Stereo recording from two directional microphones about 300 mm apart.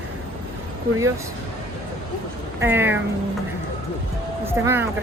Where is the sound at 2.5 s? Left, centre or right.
Centre.